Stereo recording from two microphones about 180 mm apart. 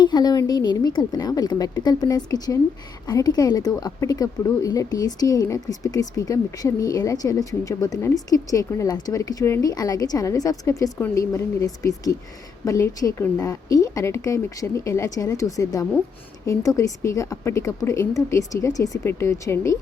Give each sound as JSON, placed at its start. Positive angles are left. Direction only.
{"t": 0.0, "sound": "speech", "side_deg": 20}